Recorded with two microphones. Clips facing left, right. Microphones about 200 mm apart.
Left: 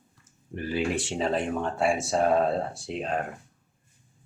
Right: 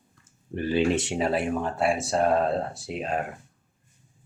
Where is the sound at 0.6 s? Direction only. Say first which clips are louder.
Right 5 dB; 25° right (ahead or behind); by 3.2 s 5° right (ahead or behind).